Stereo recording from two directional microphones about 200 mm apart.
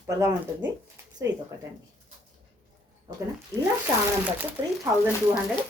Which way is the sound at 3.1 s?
20° right (ahead or behind).